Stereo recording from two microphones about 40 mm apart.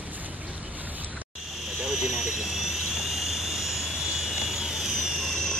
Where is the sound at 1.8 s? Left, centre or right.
Centre.